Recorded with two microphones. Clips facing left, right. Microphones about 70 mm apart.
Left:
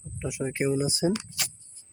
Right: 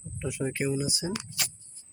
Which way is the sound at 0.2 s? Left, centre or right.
Centre.